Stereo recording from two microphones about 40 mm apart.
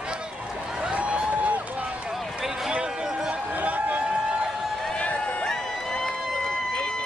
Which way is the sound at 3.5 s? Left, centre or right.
Right.